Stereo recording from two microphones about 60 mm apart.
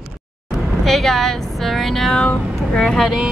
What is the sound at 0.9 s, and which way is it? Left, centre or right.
Speech, centre.